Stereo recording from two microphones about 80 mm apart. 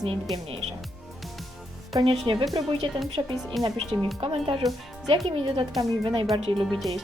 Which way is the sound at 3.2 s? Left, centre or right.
Right.